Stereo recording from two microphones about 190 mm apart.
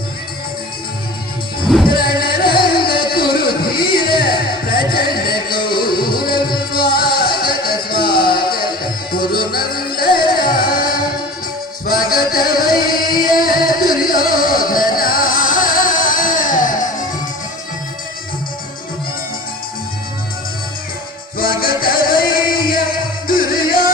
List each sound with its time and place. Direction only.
1.6 s music: centre (ahead or behind)
1.9 s music: 50° left (ahead or behind)
21.3 s music: 50° left (ahead or behind)